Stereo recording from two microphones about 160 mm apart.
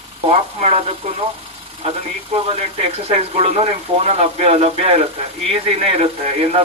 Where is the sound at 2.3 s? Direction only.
40° right (ahead or behind).